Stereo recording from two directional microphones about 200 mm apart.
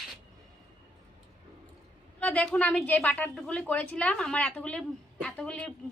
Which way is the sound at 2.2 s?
5° left (ahead or behind).